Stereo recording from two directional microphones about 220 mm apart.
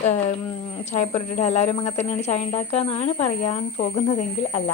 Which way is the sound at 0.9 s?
30° left (ahead or behind).